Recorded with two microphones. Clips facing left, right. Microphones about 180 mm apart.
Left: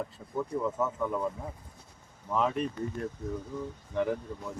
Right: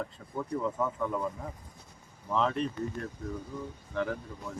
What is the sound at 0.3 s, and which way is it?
Speech, 5° left (ahead or behind).